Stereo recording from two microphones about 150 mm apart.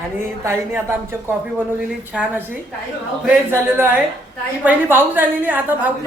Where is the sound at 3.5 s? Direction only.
15° right (ahead or behind).